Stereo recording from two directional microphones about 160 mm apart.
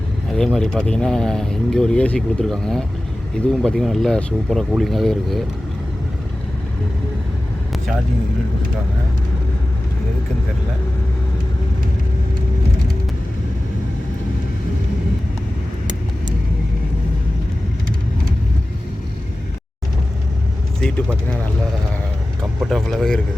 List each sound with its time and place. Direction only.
0.3 s speech: 5° left (ahead or behind)
22.6 s speech: centre (ahead or behind)